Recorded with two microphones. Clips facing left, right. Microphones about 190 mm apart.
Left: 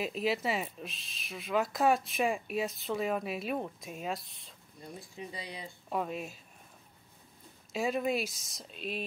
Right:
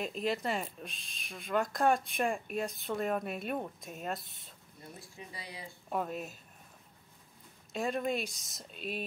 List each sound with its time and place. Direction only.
0.0 s speech: 5° left (ahead or behind)
5.1 s speech: 20° left (ahead or behind)
5.9 s speech: centre (ahead or behind)
7.7 s speech: 5° left (ahead or behind)